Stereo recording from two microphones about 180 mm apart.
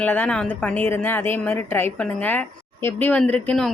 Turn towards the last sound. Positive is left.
turn(degrees=5)  # may be behind; listen again after turning